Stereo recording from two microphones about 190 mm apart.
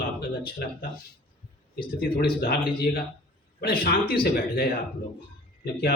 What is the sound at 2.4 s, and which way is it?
A man's voice, 55° left (ahead or behind).